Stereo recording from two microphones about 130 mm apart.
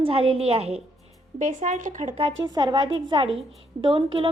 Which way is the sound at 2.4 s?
35° right (ahead or behind).